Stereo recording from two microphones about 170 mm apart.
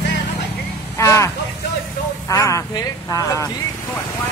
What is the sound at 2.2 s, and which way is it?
Speech, 20° left (ahead or behind).